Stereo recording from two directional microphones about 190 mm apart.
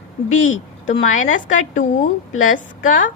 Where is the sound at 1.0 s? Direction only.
40° left (ahead or behind).